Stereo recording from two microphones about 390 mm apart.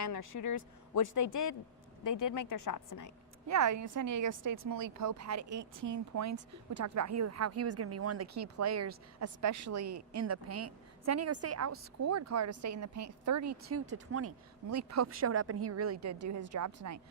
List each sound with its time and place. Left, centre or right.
0.0 s speech: left
3.4 s a woman's voice: right